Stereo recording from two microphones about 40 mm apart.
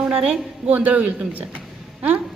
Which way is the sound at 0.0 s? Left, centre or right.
Right.